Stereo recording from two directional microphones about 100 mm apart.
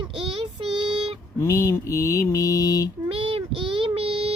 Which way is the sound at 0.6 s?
55° right (ahead or behind).